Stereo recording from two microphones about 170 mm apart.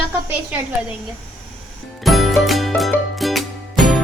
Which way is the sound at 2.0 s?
Centre (ahead or behind).